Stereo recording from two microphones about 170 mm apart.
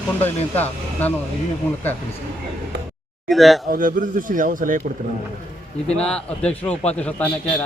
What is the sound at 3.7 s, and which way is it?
A man's voice, 55° right (ahead or behind).